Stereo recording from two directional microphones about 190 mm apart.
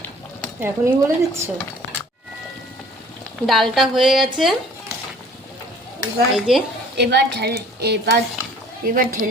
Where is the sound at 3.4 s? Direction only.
Centre (ahead or behind).